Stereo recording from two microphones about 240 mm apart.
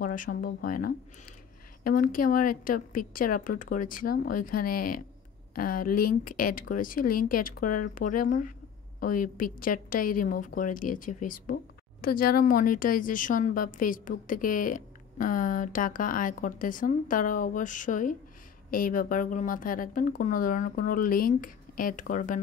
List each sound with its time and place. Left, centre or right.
0.0 s a woman's voice: left